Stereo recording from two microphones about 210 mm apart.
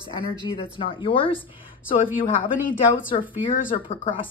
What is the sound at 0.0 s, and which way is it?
Speech, 25° left (ahead or behind).